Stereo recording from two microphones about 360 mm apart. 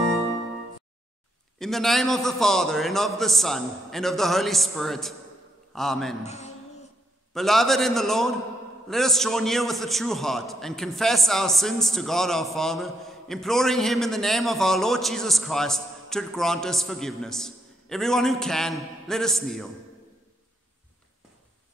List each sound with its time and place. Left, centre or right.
1.6 s a man's voice: centre
6.2 s speech: centre
7.3 s a man's voice: centre